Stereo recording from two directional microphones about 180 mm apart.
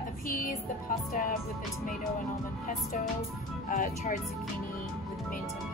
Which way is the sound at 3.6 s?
45° left (ahead or behind).